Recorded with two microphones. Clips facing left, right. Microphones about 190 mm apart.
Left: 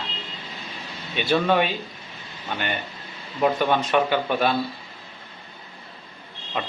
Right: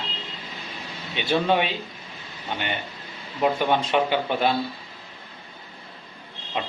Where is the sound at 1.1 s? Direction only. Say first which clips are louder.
Left 1 dB; 15° right (ahead or behind).